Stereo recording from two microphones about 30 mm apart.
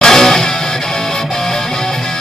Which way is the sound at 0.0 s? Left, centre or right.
Centre.